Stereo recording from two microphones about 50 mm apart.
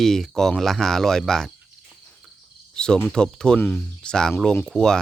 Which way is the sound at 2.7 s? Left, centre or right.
Centre.